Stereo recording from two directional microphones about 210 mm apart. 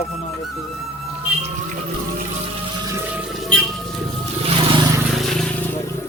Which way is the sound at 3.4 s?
Centre (ahead or behind).